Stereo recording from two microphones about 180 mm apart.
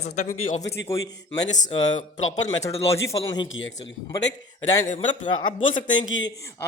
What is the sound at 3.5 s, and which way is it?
Speech, 90° left.